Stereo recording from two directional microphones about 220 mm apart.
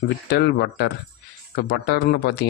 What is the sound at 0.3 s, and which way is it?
Speech, 50° left (ahead or behind).